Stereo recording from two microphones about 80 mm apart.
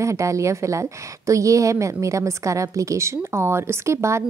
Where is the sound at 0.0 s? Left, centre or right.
Right.